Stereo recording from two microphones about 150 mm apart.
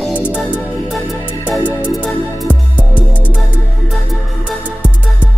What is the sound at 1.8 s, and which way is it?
Music, 10° left (ahead or behind).